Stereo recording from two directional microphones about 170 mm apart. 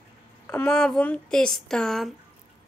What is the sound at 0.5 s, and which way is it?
Speech, 5° left (ahead or behind).